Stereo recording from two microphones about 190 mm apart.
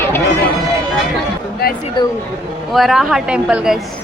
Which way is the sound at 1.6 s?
55° left (ahead or behind).